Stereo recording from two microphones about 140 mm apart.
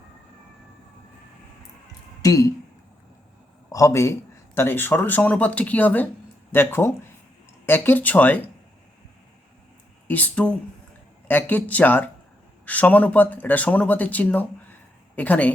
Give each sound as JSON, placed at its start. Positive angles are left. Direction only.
{"t": 2.2, "sound": "speech", "side_deg": 25}
{"t": 3.7, "sound": "a man's voice", "side_deg": 20}
{"t": 10.1, "sound": "a man's voice", "side_deg": 10}